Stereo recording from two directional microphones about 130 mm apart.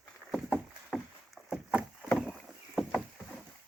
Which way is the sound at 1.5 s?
10° right (ahead or behind).